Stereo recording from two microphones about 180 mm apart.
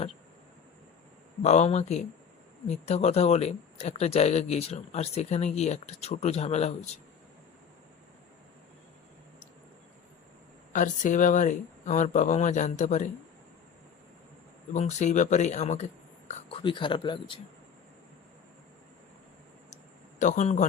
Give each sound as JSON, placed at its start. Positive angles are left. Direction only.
{"t": 1.4, "sound": "speech", "side_deg": 40}
{"t": 10.7, "sound": "speech", "side_deg": 45}
{"t": 14.7, "sound": "speech", "side_deg": 40}
{"t": 19.7, "sound": "a sound", "side_deg": 45}